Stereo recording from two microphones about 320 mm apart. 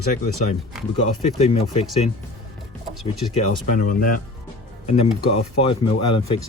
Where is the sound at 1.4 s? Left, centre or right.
Centre.